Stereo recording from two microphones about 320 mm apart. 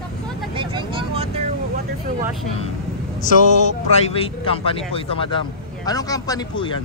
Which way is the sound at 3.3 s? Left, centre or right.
Left.